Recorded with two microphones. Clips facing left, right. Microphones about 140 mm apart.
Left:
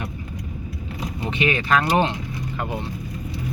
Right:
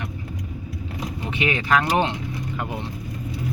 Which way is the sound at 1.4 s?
15° right (ahead or behind).